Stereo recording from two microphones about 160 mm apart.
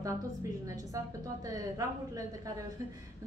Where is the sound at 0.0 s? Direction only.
20° right (ahead or behind).